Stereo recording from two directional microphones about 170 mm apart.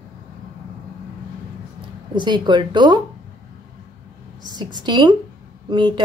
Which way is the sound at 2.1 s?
25° right (ahead or behind).